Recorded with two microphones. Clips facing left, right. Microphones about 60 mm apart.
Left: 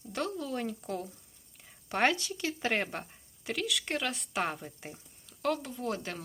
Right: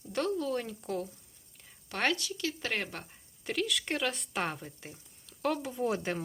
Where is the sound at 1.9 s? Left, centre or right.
Left.